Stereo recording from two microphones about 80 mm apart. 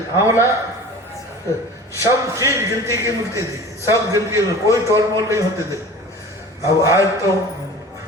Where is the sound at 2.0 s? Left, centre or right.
Right.